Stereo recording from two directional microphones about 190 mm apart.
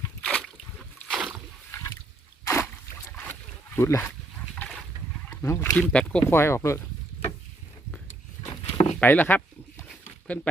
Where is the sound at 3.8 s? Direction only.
15° left (ahead or behind).